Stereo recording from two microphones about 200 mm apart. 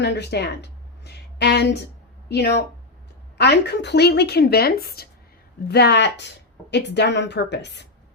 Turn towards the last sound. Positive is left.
turn(degrees=55)  # may be behind; listen again after turning